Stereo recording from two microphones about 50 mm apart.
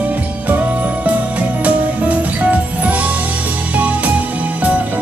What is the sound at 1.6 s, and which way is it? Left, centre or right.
Music, right.